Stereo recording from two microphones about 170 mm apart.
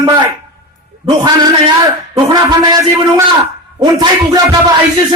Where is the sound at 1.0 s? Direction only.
25° right (ahead or behind).